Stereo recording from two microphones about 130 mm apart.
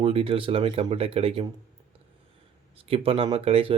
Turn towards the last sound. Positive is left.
turn(degrees=-45)  # may be behind; listen again after turning